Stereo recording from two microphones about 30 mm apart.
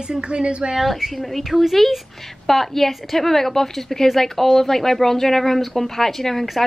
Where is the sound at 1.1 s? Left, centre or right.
Centre.